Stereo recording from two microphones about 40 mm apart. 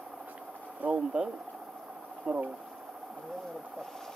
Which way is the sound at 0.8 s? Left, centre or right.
Right.